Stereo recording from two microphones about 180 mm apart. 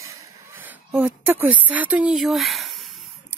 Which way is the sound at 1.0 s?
10° right (ahead or behind).